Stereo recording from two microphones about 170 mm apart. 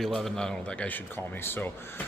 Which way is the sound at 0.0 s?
Centre (ahead or behind).